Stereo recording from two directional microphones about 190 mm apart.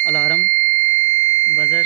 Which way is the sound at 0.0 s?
10° left (ahead or behind).